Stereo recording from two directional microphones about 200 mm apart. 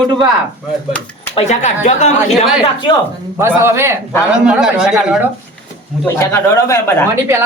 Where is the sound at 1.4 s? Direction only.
35° left (ahead or behind).